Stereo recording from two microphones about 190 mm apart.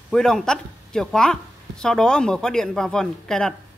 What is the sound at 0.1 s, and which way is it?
Speech, 5° left (ahead or behind).